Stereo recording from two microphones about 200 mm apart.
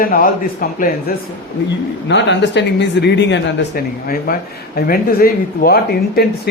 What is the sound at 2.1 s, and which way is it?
Speech, 60° left (ahead or behind).